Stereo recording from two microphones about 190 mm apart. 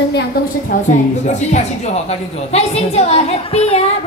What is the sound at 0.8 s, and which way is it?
A woman's voice, 40° left (ahead or behind).